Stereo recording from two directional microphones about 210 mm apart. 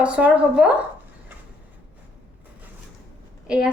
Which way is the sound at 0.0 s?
5° right (ahead or behind).